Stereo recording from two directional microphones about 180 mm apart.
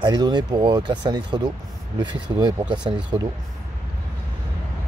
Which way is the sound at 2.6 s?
5° right (ahead or behind).